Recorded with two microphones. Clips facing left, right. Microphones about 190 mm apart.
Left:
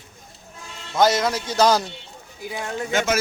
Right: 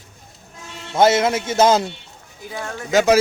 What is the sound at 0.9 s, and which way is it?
Speech, 25° right (ahead or behind).